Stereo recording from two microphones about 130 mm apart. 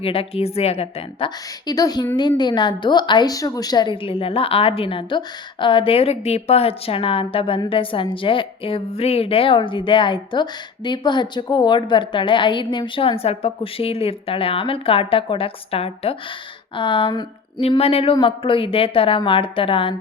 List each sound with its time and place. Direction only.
0.0 s a woman's voice: 45° left (ahead or behind)
1.6 s a woman's voice: 30° left (ahead or behind)
17.6 s a woman's voice: 50° left (ahead or behind)